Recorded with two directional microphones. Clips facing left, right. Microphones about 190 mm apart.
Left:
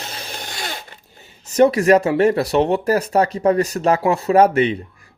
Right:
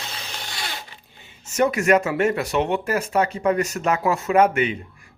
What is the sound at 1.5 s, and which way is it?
Speech, 35° left (ahead or behind).